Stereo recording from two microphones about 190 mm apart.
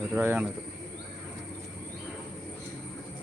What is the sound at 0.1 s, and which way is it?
Speech, 10° right (ahead or behind).